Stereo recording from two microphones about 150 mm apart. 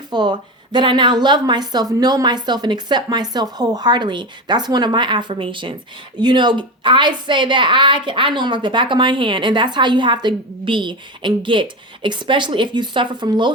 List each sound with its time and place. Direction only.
0.1 s a woman's voice: 30° right (ahead or behind)